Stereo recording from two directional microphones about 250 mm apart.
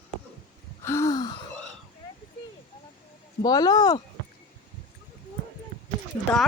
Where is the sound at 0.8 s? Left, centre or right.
Centre.